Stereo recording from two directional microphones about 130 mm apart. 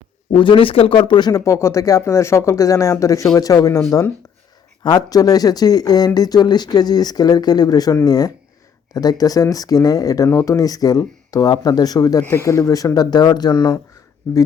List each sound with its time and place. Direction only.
0.3 s speech: 40° left (ahead or behind); by 4.1 s 20° left (ahead or behind)
4.8 s speech: 35° left (ahead or behind)